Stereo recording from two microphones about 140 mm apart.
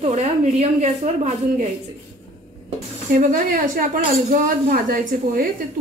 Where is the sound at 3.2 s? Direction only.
70° right (ahead or behind).